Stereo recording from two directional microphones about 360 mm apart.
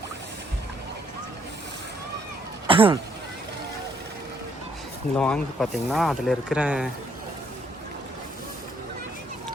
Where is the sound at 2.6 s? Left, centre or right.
Centre.